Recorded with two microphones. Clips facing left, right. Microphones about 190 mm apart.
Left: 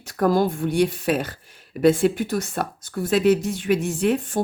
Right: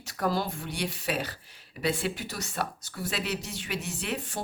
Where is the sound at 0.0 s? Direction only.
50° left (ahead or behind).